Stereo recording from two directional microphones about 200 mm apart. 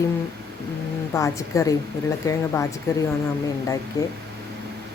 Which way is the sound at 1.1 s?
15° left (ahead or behind).